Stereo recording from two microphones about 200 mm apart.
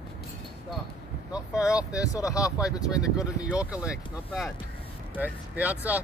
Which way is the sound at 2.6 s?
5° right (ahead or behind).